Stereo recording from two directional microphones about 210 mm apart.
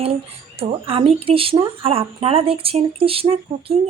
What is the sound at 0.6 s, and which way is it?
Speech, 25° right (ahead or behind).